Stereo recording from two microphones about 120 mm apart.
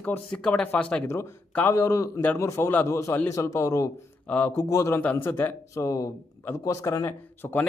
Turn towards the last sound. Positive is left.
turn(degrees=20)  # may be behind; listen again after turning